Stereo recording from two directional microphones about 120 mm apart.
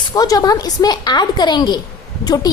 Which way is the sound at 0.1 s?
30° left (ahead or behind).